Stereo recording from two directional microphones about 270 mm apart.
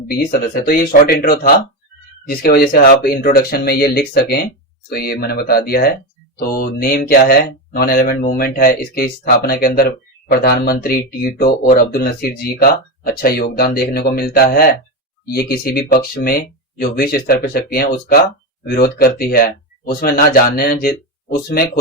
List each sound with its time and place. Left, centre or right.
0.1 s speech: left